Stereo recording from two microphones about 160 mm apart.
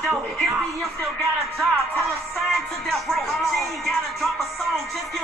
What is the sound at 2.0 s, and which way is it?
Music, centre (ahead or behind).